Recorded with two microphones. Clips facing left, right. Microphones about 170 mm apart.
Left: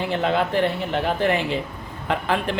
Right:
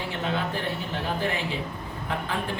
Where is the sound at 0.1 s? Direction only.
75° left (ahead or behind).